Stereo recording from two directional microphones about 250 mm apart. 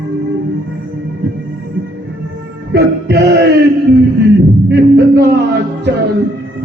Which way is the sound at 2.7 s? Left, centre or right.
Right.